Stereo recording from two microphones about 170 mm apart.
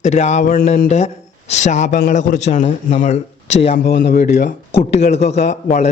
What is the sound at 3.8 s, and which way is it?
Speech, 90° left.